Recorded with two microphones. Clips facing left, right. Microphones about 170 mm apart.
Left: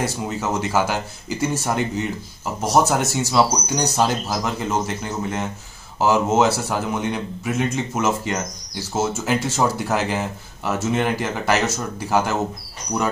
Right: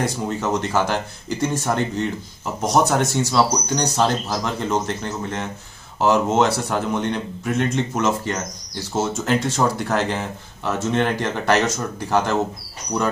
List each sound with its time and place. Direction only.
0.0 s speech: 5° left (ahead or behind)